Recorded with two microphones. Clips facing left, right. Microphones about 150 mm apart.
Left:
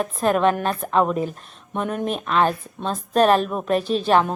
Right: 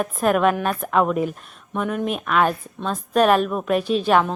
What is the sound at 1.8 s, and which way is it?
A woman's voice, 40° left (ahead or behind).